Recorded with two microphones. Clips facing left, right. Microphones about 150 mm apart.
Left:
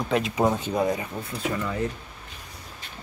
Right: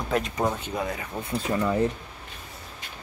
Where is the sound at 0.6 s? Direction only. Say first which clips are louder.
Left 6 dB; 30° left (ahead or behind).